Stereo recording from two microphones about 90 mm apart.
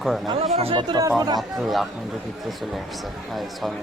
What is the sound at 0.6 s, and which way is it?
Speech, 80° right.